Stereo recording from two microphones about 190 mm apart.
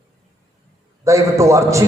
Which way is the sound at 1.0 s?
15° right (ahead or behind).